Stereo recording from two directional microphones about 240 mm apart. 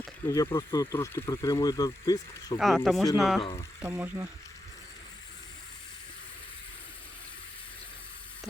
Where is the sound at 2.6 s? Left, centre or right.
Centre.